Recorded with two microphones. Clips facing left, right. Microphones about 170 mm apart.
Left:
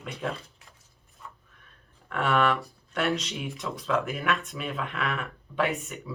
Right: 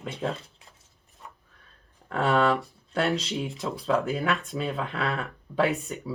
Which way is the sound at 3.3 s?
20° right (ahead or behind).